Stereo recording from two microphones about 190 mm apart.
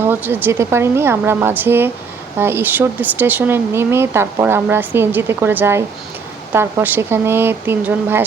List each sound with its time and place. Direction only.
0.0 s speech: 10° right (ahead or behind)